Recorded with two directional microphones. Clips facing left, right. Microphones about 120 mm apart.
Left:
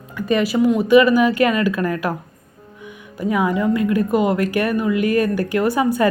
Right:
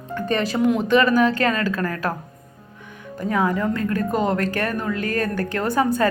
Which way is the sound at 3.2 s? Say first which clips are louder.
Left 2 dB; 15° left (ahead or behind).